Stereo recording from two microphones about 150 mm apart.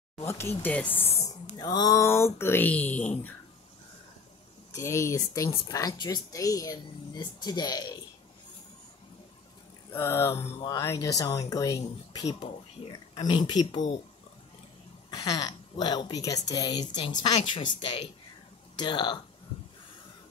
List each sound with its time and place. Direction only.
0.3 s speech: 15° left (ahead or behind)
0.9 s speech: 45° left (ahead or behind)
1.6 s speech: 25° left (ahead or behind); by 3.3 s 10° left (ahead or behind)
4.7 s a woman's voice: 20° left (ahead or behind)
9.9 s a woman's voice: 15° left (ahead or behind); by 14.0 s 30° left (ahead or behind)
15.0 s a woman's voice: 25° left (ahead or behind)